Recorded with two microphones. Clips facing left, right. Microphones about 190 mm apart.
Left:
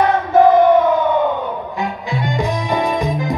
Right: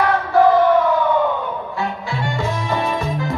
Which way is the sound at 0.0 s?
20° left (ahead or behind).